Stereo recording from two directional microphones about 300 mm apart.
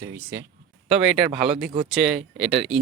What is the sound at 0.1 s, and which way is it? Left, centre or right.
Speech, centre.